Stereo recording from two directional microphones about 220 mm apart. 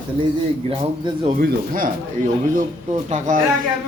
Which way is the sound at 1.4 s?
40° right (ahead or behind).